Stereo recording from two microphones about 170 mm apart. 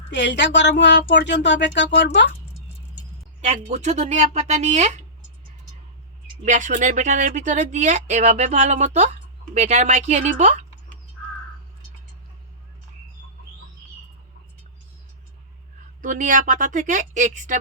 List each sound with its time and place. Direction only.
0.1 s speech: 90° left
3.4 s speech: 40° right (ahead or behind)
6.4 s speech: 45° right (ahead or behind)
16.0 s speech: 50° right (ahead or behind)